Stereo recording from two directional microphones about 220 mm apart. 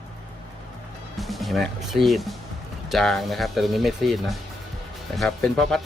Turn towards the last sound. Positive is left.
turn(degrees=0)  # may be behind; listen again after turning